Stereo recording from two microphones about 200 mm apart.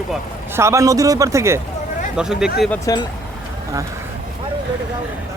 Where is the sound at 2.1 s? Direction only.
5° right (ahead or behind).